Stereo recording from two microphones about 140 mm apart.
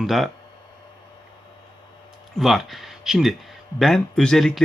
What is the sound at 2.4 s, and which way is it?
Speech, centre (ahead or behind).